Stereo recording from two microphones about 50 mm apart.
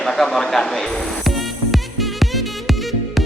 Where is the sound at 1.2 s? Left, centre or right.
Centre.